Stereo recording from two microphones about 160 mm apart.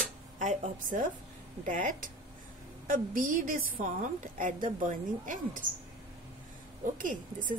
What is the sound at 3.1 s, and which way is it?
A woman's voice, 60° right (ahead or behind).